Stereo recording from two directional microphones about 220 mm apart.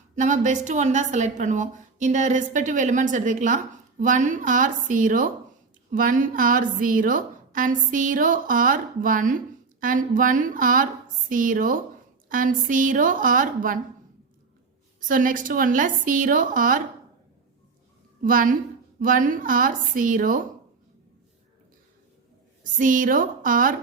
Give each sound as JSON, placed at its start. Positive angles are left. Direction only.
{"t": 0.2, "sound": "a woman's voice", "side_deg": -35}
{"t": 15.0, "sound": "a woman's voice", "side_deg": -40}
{"t": 18.2, "sound": "a woman's voice", "side_deg": -40}
{"t": 22.8, "sound": "a woman's voice", "side_deg": -35}